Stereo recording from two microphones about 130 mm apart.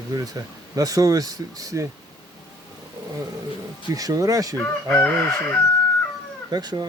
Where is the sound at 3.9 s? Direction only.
25° right (ahead or behind).